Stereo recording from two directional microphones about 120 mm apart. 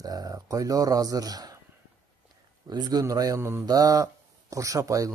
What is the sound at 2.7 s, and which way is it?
A man's voice, 35° right (ahead or behind).